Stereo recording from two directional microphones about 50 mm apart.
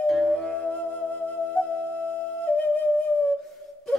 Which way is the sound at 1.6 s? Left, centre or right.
Left.